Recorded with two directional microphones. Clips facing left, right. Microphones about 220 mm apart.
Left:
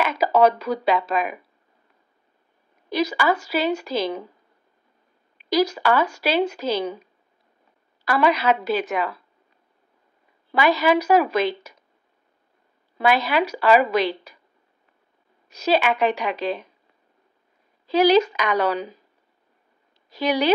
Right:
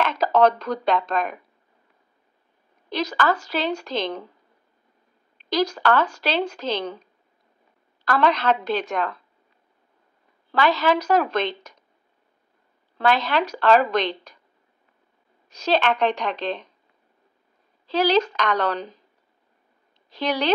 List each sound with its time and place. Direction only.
0.0 s speech: 10° left (ahead or behind)
2.9 s speech: 10° left (ahead or behind)
5.4 s speech: 10° left (ahead or behind)
10.5 s speech: 10° left (ahead or behind)
12.9 s speech: 10° left (ahead or behind)
15.5 s speech: 10° left (ahead or behind)
17.8 s speech: 10° left (ahead or behind)
20.1 s a woman's voice: 10° left (ahead or behind)